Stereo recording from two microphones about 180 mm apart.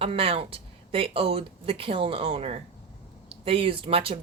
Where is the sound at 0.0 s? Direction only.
30° right (ahead or behind).